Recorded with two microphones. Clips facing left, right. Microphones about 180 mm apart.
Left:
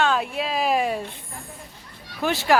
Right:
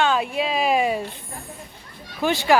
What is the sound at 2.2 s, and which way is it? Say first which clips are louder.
Speech: right 2 dB; centre (ahead or behind).